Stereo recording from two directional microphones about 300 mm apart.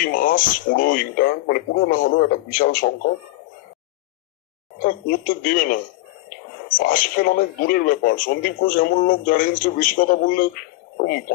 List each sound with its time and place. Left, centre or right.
0.0 s speech: left
4.7 s speech: left
6.8 s speech: left